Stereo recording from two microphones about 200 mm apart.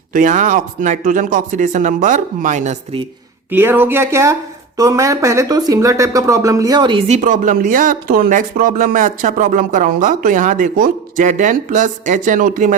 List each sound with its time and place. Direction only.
0.1 s speech: 40° right (ahead or behind)
3.5 s speech: 10° right (ahead or behind)
7.1 s speech: 40° right (ahead or behind)